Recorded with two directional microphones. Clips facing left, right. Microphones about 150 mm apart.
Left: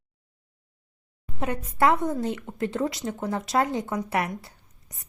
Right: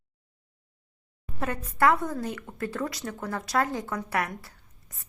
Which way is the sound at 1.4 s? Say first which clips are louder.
Left 1 dB; 20° left (ahead or behind).